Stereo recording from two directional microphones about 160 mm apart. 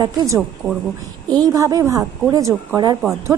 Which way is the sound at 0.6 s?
5° left (ahead or behind).